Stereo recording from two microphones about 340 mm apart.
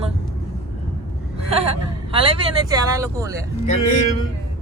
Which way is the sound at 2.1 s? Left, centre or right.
Centre.